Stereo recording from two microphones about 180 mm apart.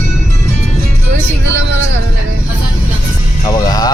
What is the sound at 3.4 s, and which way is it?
Music, 20° left (ahead or behind).